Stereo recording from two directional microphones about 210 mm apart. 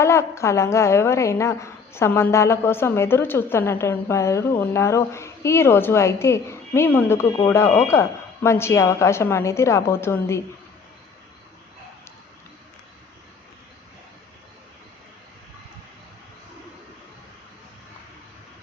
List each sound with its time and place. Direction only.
0.0 s a woman's voice: 15° left (ahead or behind)